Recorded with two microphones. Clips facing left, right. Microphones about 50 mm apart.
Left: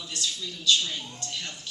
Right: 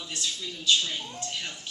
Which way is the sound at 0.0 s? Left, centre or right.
Right.